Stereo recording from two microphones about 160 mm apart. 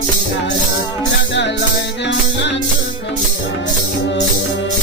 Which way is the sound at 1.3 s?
90° left.